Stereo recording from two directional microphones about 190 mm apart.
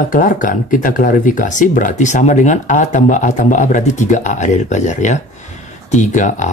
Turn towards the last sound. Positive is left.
turn(degrees=40)  # may be behind; listen again after turning